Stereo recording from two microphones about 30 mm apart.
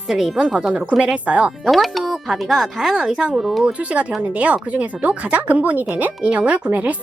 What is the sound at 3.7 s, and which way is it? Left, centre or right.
Speech, right.